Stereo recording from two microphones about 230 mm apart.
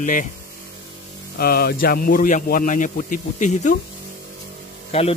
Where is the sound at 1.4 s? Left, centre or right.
Left.